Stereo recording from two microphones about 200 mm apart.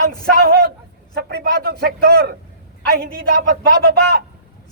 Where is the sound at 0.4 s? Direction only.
50° right (ahead or behind).